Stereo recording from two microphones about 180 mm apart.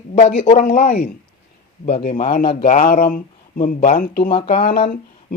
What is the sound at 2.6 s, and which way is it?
Speech, 50° left (ahead or behind).